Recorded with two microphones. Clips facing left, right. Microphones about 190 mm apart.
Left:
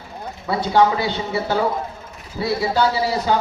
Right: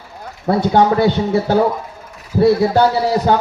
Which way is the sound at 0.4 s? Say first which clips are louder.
Right 4 dB; 50° right (ahead or behind).